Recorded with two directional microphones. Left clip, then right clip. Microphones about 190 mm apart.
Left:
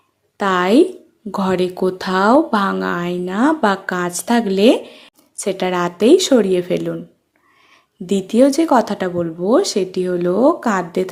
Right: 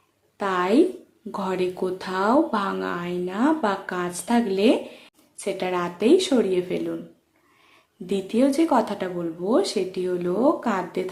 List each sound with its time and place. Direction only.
0.3 s a woman's voice: 45° left (ahead or behind)
8.0 s speech: 40° left (ahead or behind)